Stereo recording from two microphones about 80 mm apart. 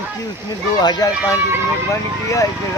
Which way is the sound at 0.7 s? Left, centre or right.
Left.